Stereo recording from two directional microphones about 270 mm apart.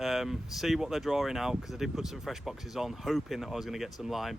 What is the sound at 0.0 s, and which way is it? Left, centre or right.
Speech, centre.